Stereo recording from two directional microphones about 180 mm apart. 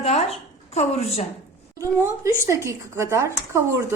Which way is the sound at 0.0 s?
35° left (ahead or behind).